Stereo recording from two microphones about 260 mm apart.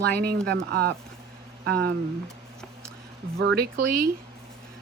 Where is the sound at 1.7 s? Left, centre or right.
Right.